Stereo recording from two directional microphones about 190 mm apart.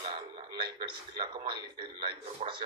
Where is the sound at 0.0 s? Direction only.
25° right (ahead or behind).